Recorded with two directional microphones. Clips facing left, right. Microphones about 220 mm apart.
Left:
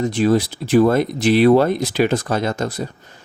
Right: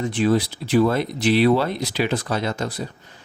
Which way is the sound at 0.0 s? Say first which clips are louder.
Left 3 dB; 40° left (ahead or behind).